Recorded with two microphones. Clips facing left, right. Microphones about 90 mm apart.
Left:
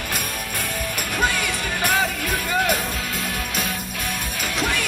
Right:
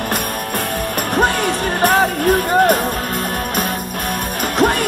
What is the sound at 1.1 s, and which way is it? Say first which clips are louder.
Music: right 7 dB; 50° right (ahead or behind).